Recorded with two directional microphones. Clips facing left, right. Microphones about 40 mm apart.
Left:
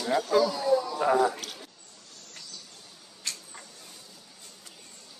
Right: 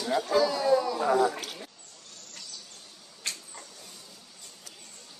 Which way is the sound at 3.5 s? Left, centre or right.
Left.